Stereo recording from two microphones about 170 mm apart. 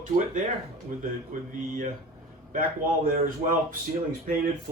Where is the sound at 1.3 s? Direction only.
50° right (ahead or behind).